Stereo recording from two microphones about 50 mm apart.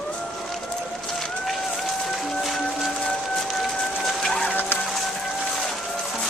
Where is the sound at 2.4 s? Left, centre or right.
Centre.